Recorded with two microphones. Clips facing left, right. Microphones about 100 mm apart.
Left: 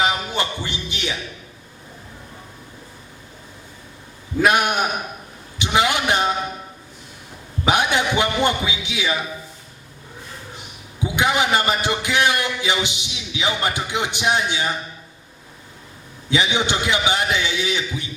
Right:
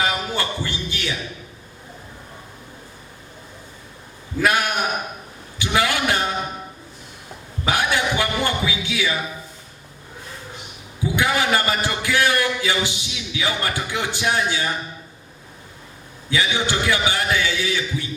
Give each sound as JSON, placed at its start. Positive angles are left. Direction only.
{"t": 0.0, "sound": "a sound", "side_deg": 20}
{"t": 4.4, "sound": "a man's voice", "side_deg": 20}
{"t": 5.5, "sound": "a sound", "side_deg": 20}
{"t": 7.6, "sound": "music", "side_deg": 20}
{"t": 11.0, "sound": "a man's voice", "side_deg": 20}
{"t": 16.3, "sound": "a man's voice", "side_deg": 20}